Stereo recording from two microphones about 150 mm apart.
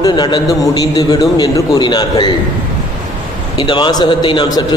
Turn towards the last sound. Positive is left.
turn(degrees=25)  # may be behind; listen again after turning